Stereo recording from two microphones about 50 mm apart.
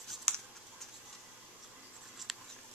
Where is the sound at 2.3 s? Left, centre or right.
Centre.